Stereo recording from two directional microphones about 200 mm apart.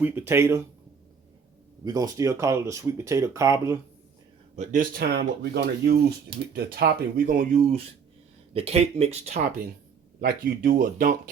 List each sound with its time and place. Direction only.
0.0 s speech: 10° right (ahead or behind)
1.8 s speech: 20° right (ahead or behind)
4.5 s speech: 40° right (ahead or behind)
10.2 s speech: 50° right (ahead or behind)